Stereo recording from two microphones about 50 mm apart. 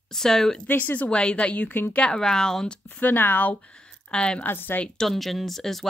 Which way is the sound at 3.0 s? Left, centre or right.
Left.